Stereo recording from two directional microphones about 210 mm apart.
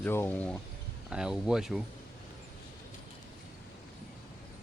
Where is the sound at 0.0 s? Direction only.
10° left (ahead or behind).